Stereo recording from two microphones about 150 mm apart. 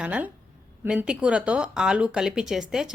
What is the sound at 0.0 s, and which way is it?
Speech, 10° right (ahead or behind).